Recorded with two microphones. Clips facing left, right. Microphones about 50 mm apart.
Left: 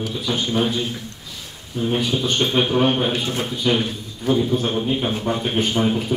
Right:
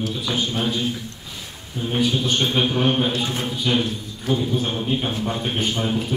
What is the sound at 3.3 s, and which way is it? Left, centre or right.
Speech, left.